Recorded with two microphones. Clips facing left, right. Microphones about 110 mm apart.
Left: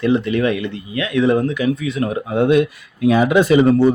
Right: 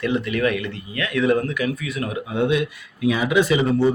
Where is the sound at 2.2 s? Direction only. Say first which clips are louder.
Left 6 dB; 50° left (ahead or behind).